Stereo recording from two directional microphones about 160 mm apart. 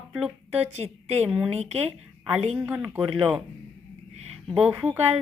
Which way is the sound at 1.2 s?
5° right (ahead or behind).